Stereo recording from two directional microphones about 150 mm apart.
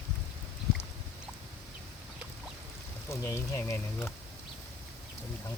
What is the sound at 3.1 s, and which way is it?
Speech, 20° left (ahead or behind).